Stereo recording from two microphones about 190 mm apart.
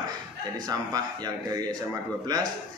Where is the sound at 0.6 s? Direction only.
20° right (ahead or behind).